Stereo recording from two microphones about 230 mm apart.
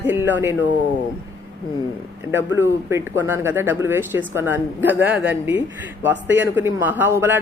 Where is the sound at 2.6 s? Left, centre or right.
Centre.